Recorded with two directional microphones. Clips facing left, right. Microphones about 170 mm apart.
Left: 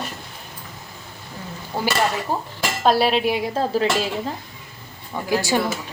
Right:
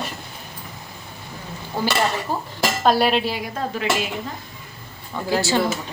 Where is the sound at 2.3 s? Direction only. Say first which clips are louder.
Left 1 dB; 15° left (ahead or behind).